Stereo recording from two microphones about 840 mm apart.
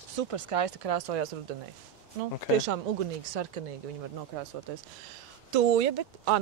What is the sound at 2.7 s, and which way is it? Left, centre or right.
Speech, right.